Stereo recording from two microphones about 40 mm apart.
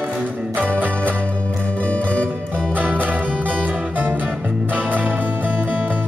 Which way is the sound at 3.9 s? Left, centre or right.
Right.